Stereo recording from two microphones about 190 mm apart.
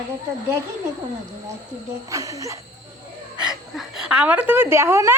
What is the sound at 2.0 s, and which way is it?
Speech, 15° right (ahead or behind).